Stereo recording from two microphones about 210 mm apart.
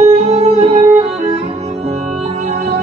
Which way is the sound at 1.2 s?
35° right (ahead or behind).